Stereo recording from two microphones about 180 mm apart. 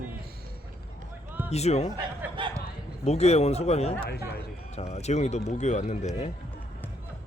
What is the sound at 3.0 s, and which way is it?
Speech, 35° left (ahead or behind).